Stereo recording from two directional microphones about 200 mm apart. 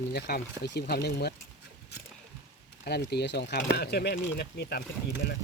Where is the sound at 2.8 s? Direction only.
55° left (ahead or behind).